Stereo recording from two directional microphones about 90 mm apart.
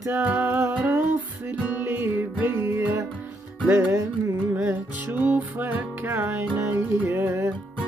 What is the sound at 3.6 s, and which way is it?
Speech, 15° right (ahead or behind).